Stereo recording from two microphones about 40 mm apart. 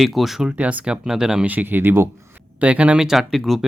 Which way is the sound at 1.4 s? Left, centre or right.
Right.